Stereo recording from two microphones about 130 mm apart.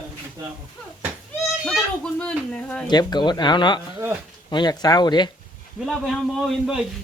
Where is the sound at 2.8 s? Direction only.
35° left (ahead or behind).